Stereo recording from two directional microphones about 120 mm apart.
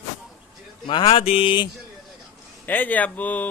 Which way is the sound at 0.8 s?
45° left (ahead or behind).